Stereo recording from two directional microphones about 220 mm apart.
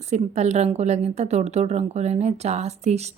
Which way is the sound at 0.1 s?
30° right (ahead or behind).